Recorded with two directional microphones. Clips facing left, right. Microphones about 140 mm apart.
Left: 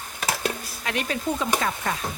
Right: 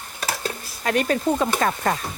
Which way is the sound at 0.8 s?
45° right (ahead or behind).